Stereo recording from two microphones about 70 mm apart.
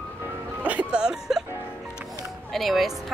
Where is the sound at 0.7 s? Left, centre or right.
Centre.